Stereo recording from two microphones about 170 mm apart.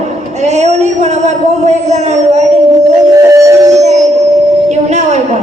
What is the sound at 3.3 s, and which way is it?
Music, 20° right (ahead or behind).